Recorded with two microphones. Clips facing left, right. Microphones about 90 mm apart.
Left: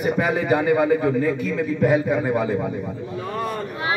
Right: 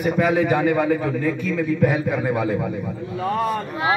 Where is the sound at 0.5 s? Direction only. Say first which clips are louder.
Left 1 dB; 5° left (ahead or behind).